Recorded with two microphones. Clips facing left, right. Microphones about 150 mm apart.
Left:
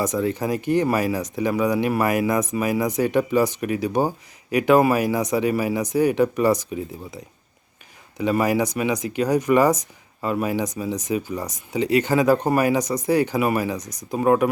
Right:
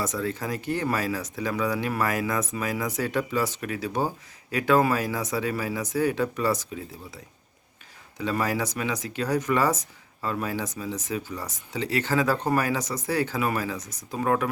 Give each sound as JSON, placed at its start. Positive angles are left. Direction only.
{"t": 0.0, "sound": "speech", "side_deg": 15}
{"t": 8.2, "sound": "speech", "side_deg": 15}